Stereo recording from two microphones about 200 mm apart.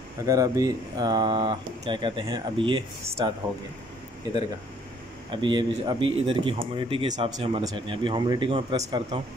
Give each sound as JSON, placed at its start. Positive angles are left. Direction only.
{"t": 0.3, "sound": "speech", "side_deg": -15}
{"t": 5.3, "sound": "speech", "side_deg": -25}